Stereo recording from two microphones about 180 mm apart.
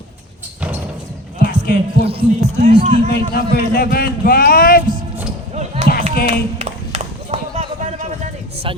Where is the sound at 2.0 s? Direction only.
30° right (ahead or behind).